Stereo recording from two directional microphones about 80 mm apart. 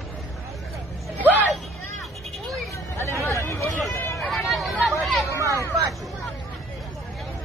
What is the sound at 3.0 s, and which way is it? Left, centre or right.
Hubbub, left.